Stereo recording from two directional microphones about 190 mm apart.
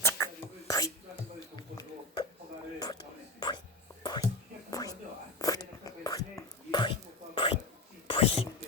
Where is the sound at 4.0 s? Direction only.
25° left (ahead or behind).